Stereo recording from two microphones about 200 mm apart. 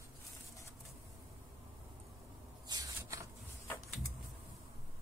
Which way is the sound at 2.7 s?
15° right (ahead or behind).